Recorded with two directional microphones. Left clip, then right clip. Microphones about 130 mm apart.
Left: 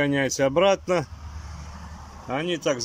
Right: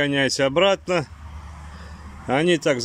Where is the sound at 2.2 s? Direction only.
30° right (ahead or behind).